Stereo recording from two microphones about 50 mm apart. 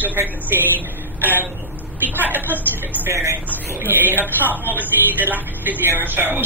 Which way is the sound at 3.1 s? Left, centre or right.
Right.